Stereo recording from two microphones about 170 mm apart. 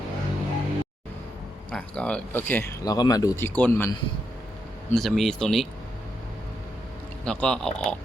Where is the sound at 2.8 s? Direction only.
20° left (ahead or behind).